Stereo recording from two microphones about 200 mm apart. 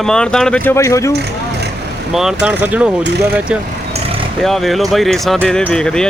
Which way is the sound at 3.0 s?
55° right (ahead or behind).